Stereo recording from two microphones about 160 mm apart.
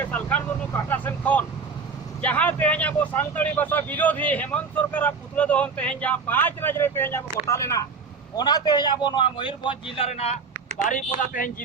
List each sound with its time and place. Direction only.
0.0 s vehicle: 10° left (ahead or behind)
2.2 s a man's voice: 10° left (ahead or behind); by 10.3 s 40° left (ahead or behind)
10.8 s a man's voice: 55° left (ahead or behind)